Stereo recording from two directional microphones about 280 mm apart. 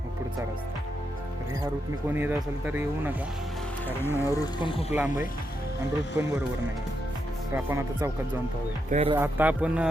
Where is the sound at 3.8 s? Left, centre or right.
Centre.